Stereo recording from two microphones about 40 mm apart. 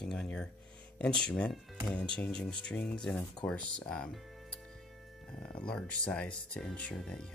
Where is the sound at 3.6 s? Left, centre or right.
Left.